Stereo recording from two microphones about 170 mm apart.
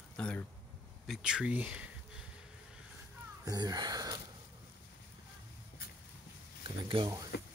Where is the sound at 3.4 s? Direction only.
25° right (ahead or behind).